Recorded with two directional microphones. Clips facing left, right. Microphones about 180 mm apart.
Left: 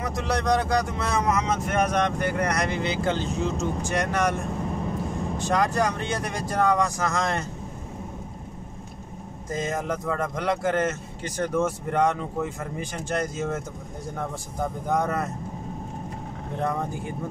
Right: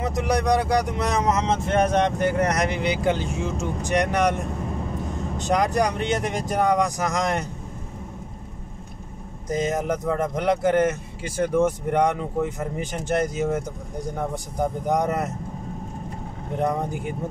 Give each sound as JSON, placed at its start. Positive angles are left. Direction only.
{"t": 0.0, "sound": "speech", "side_deg": -15}
{"t": 5.4, "sound": "speech", "side_deg": -15}
{"t": 9.5, "sound": "speech", "side_deg": -20}
{"t": 16.6, "sound": "speech", "side_deg": -20}